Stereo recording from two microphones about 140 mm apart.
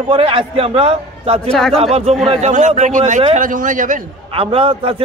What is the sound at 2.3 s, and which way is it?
A man's voice, 55° right (ahead or behind).